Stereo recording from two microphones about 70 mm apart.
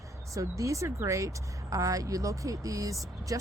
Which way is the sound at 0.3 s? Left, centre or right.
Right.